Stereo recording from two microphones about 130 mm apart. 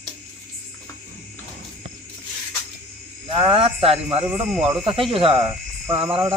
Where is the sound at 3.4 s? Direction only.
45° right (ahead or behind).